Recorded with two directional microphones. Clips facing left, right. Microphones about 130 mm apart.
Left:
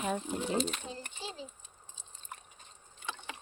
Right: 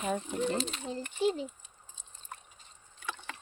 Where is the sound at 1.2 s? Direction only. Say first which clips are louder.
Right 16 dB; 60° right (ahead or behind).